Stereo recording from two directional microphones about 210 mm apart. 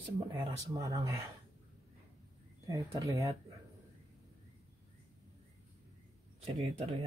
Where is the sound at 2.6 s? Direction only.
15° right (ahead or behind).